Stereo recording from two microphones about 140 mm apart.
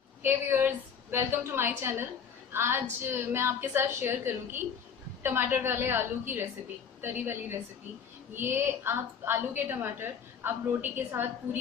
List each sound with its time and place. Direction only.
0.2 s a woman's voice: 15° right (ahead or behind)